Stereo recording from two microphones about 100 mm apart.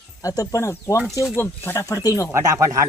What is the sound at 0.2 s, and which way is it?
Speech, 35° left (ahead or behind).